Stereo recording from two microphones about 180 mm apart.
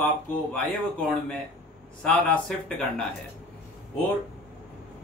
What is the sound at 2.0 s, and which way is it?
Speech, 5° left (ahead or behind).